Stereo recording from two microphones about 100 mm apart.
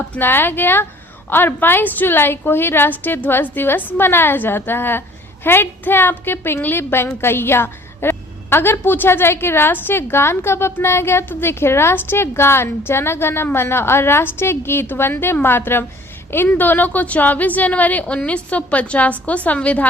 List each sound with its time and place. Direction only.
0.2 s a woman's voice: 20° left (ahead or behind)